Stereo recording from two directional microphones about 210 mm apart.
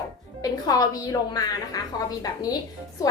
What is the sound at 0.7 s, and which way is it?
A woman's voice, 15° left (ahead or behind).